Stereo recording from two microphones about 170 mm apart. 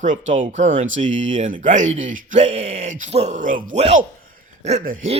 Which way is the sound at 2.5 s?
35° right (ahead or behind).